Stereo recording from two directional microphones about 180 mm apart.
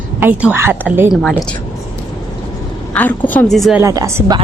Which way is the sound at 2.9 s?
10° left (ahead or behind).